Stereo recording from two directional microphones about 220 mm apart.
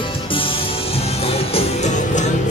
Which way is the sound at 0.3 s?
25° left (ahead or behind).